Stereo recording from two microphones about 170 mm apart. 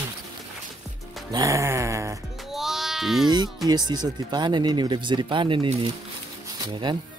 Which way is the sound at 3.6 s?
25° right (ahead or behind).